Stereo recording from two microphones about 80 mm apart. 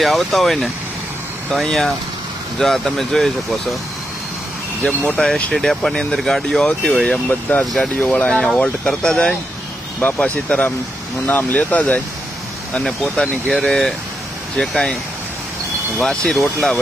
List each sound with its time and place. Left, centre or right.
0.0 s speech: centre
4.8 s speech: centre
5.1 s speech: centre
7.6 s speech: centre
7.9 s speech: centre
12.8 s speech: centre
16.0 s speech: centre